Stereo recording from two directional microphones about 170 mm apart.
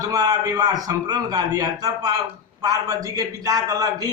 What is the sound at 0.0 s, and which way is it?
Speech, 20° right (ahead or behind).